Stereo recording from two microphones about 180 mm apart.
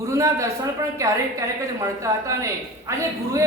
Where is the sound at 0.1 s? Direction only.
15° right (ahead or behind).